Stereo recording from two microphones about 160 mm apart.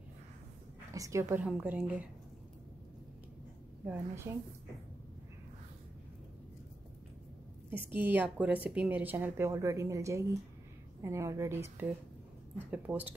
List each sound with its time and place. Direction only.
0.9 s a woman's voice: 20° right (ahead or behind)
3.8 s a woman's voice: 15° right (ahead or behind)
7.7 s a woman's voice: 10° right (ahead or behind)